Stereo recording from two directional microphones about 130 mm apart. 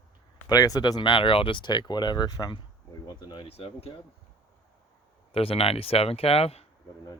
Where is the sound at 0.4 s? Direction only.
30° left (ahead or behind).